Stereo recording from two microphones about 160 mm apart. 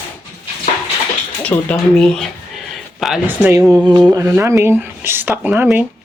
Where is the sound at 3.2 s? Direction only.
15° right (ahead or behind).